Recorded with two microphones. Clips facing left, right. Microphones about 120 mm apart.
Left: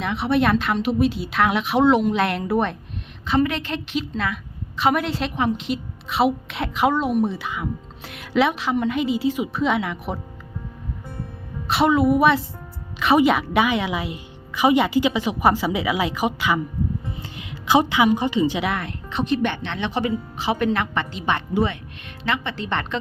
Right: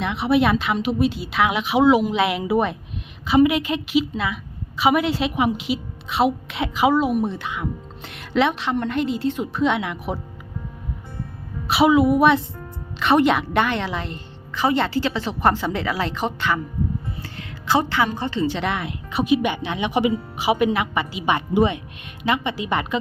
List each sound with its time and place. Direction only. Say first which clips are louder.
0.0 s a woman's voice: right 1 dB; centre (ahead or behind)
11.7 s a woman's voice: right 2 dB; centre (ahead or behind); by 18.6 s 15° left (ahead or behind)
18.6 s speech: even; centre (ahead or behind)